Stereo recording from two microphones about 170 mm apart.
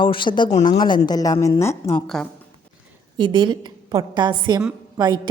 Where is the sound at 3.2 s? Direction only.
25° right (ahead or behind).